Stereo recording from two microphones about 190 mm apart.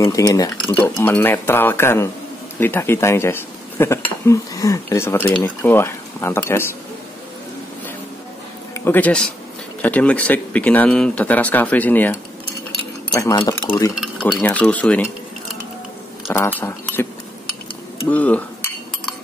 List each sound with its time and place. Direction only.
0.0 s speech: 15° left (ahead or behind)
8.7 s speech: 10° left (ahead or behind)
16.3 s speech: 10° left (ahead or behind)
18.1 s speech: 10° left (ahead or behind)